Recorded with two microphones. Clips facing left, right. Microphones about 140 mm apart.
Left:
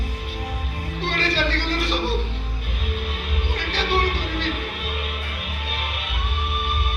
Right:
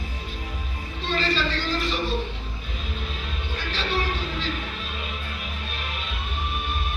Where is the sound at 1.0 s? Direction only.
65° left (ahead or behind).